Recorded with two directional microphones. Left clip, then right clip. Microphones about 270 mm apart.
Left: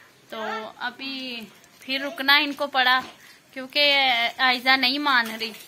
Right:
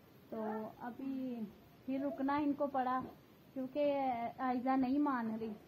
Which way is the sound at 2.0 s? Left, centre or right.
Left.